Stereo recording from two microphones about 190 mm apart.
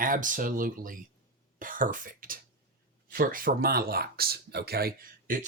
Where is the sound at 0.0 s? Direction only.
45° right (ahead or behind).